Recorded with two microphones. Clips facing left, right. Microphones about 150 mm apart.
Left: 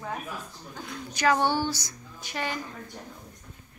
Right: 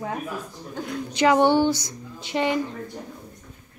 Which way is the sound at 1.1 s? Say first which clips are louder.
Right 6 dB; 20° right (ahead or behind).